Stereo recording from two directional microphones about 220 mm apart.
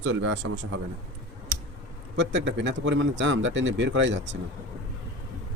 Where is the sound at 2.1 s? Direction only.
55° right (ahead or behind).